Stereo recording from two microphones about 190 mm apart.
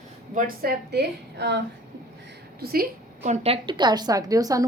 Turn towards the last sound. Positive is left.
turn(degrees=-20)  # may be behind; listen again after turning